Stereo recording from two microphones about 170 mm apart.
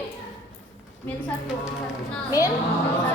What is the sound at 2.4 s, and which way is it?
Speech, 20° left (ahead or behind).